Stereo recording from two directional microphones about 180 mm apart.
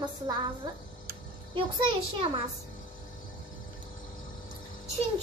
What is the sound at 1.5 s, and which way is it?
Speech, 25° right (ahead or behind).